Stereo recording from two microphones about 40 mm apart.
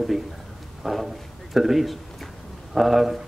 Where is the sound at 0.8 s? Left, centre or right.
Centre.